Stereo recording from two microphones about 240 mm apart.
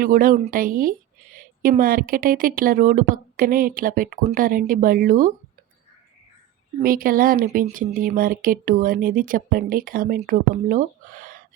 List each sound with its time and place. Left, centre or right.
0.0 s a woman's voice: right
6.8 s a woman's voice: right